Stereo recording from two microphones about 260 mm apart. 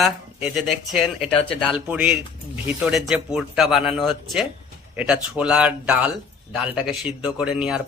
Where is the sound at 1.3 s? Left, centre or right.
Left.